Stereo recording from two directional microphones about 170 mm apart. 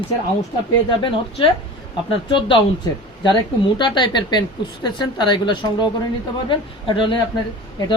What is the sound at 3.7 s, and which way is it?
Speech, 25° left (ahead or behind).